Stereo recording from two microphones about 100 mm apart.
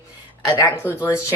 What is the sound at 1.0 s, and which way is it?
Speech, 25° left (ahead or behind).